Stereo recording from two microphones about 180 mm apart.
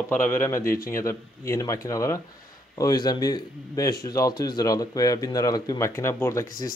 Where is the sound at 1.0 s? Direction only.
15° left (ahead or behind).